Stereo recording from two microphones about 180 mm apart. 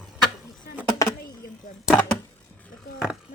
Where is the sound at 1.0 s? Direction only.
20° left (ahead or behind).